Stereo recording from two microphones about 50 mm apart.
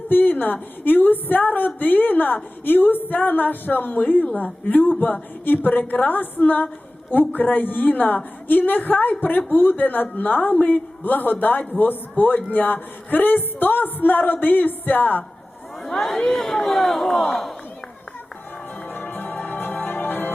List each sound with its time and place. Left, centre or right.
0.1 s a woman's voice: left
15.8 s speech: centre
18.9 s music: left